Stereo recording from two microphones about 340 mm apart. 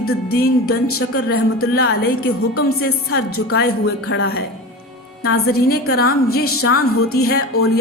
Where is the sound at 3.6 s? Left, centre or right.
Left.